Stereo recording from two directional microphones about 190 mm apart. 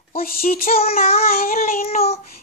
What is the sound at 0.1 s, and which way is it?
Child singing, 50° left (ahead or behind).